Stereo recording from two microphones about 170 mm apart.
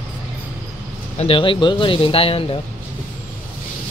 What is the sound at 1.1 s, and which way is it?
Speech, 30° left (ahead or behind).